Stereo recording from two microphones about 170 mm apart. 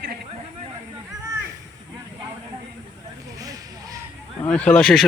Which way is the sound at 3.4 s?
20° right (ahead or behind).